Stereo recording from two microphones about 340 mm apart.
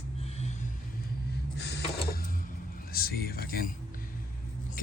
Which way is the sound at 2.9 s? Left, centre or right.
Left.